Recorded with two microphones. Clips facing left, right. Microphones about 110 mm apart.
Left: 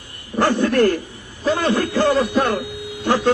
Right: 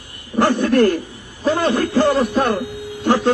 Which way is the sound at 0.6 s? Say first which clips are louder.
Right 1 dB; 15° right (ahead or behind).